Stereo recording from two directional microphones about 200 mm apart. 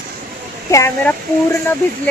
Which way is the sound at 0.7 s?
15° left (ahead or behind).